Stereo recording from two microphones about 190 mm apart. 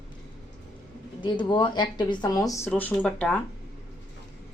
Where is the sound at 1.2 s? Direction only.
25° left (ahead or behind); by 3.4 s 5° left (ahead or behind).